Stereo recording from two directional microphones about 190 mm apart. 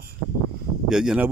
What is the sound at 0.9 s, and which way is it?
Speech, 5° right (ahead or behind).